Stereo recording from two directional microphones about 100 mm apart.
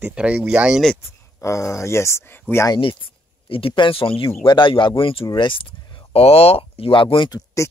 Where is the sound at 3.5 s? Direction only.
65° left (ahead or behind).